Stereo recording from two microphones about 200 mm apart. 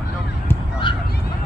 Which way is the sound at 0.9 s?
25° left (ahead or behind).